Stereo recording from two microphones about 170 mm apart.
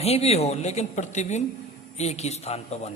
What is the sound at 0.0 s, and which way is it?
A man's voice, 40° left (ahead or behind).